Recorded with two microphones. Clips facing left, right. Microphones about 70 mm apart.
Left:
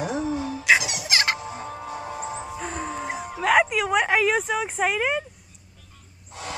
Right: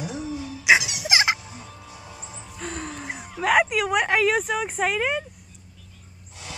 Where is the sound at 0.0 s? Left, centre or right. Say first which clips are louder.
Left 5 dB; left.